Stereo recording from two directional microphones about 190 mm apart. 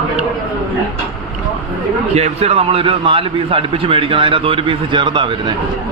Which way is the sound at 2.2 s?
35° right (ahead or behind).